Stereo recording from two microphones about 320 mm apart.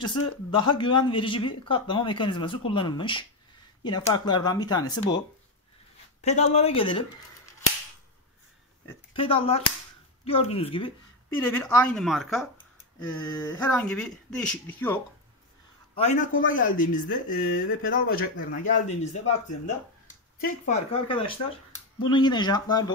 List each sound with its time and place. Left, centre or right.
0.6 s speech: centre
6.2 s speech: left
8.8 s speech: centre
16.0 s speech: left